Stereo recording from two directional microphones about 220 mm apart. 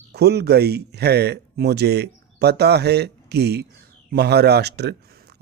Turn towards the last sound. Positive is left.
turn(degrees=-50)  # may be behind; listen again after turning